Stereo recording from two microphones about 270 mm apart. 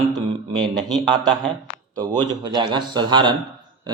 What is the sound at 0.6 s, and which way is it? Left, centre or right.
A man's voice, centre.